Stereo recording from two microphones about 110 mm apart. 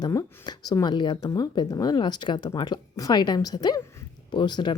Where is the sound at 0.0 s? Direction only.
35° left (ahead or behind).